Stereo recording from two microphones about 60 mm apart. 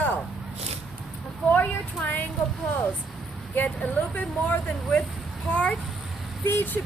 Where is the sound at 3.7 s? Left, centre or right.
Left.